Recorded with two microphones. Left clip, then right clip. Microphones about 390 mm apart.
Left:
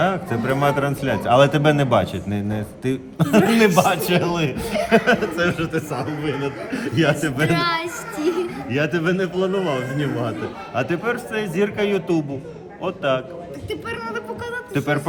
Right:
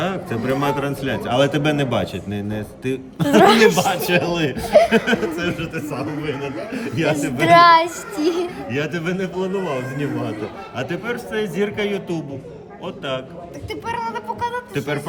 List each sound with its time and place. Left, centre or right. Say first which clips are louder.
0.0 s a man's voice: left 3 dB; centre
3.2 s a man's voice: right 5 dB; centre
3.9 s a man's voice: right 1 dB; centre
7.2 s child singing: right 9 dB; centre
8.7 s a man's voice: left 5 dB; centre